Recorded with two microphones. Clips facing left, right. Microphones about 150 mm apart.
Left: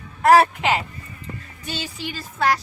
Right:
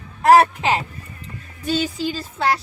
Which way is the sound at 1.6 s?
30° right (ahead or behind).